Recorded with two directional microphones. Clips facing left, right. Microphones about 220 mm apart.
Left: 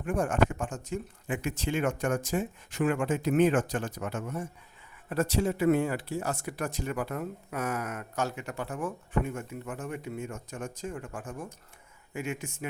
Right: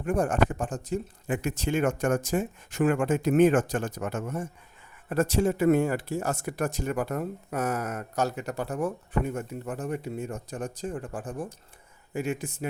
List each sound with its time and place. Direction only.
0.0 s speech: 40° right (ahead or behind)